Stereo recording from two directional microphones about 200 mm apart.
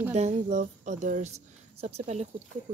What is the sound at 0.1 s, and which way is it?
Speech, 35° right (ahead or behind).